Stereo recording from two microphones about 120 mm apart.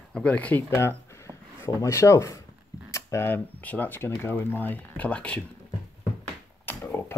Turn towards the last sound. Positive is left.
turn(degrees=15)  # may be behind; listen again after turning